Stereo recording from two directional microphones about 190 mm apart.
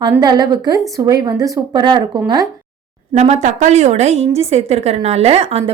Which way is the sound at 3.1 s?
35° right (ahead or behind).